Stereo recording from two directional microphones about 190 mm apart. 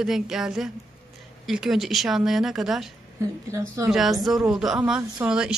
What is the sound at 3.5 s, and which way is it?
Speech, 15° right (ahead or behind).